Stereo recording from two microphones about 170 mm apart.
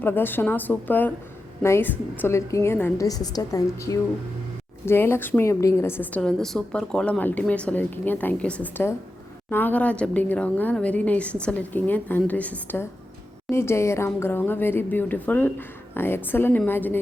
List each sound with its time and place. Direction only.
0.0 s a woman's voice: 10° left (ahead or behind)